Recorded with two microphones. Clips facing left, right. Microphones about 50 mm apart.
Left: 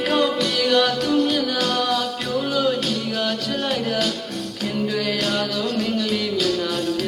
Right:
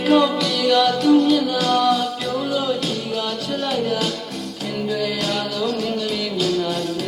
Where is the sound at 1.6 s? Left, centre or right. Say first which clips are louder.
Right 4 dB; right.